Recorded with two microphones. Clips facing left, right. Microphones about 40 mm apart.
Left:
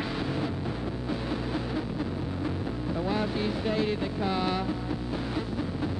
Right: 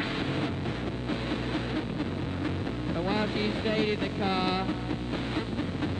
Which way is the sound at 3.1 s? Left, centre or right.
Right.